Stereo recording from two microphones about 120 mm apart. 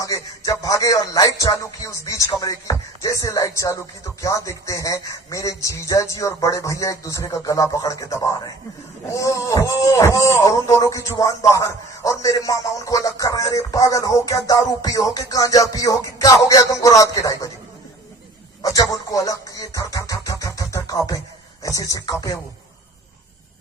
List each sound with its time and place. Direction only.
0.0 s music: 25° left (ahead or behind)
18.6 s speech: 30° left (ahead or behind)
21.6 s music: 30° left (ahead or behind)